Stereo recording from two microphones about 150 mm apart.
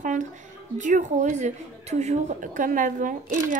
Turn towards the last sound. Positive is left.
turn(degrees=-60)  # may be behind; listen again after turning